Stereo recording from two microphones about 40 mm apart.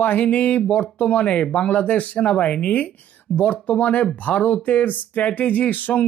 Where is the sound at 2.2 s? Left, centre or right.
Left.